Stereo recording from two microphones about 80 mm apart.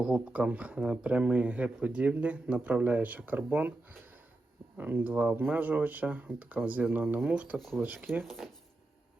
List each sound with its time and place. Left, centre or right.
0.0 s speech: centre
4.8 s speech: right
8.2 s speech: centre